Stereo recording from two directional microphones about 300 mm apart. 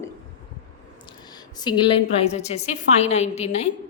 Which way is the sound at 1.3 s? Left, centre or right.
Centre.